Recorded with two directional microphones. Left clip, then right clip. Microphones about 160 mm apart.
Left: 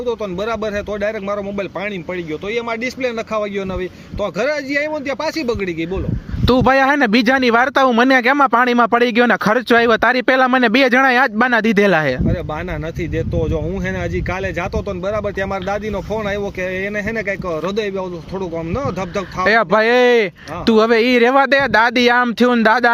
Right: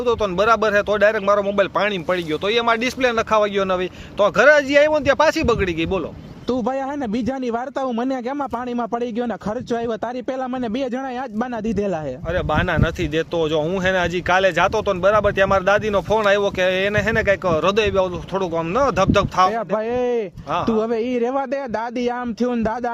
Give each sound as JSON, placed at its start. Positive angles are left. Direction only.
{"t": 0.0, "sound": "speech", "side_deg": 15}
{"t": 3.0, "sound": "speech", "side_deg": 10}
{"t": 6.5, "sound": "speech", "side_deg": 25}
{"t": 13.9, "sound": "speech", "side_deg": 10}
{"t": 16.6, "sound": "speech", "side_deg": -55}
{"t": 16.9, "sound": "speech", "side_deg": 15}
{"t": 19.4, "sound": "speech", "side_deg": 15}